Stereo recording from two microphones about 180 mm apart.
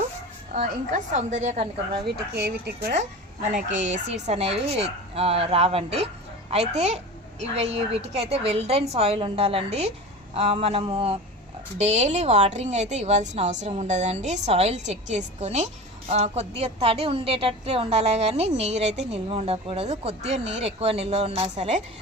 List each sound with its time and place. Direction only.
0.5 s a woman's voice: 45° right (ahead or behind)
2.0 s speech: 65° right (ahead or behind)
3.8 s a woman's voice: 40° right (ahead or behind)